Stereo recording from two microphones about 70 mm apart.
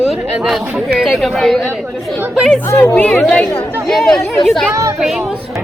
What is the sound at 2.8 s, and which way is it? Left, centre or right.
Speech, left.